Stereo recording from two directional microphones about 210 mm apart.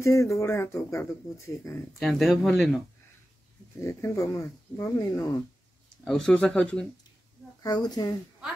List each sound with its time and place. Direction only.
0.0 s speech: 15° left (ahead or behind)
2.0 s speech: centre (ahead or behind)
3.8 s speech: 15° left (ahead or behind)
6.0 s speech: 5° left (ahead or behind)
7.6 s a child's voice: 20° left (ahead or behind)